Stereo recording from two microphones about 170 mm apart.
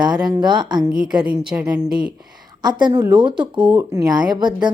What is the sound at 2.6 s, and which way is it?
Speech, 25° right (ahead or behind).